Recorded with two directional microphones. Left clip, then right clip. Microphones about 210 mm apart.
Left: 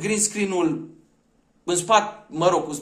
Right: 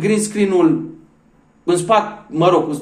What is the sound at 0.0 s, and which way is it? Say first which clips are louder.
Speech: right 7 dB; 10° left (ahead or behind).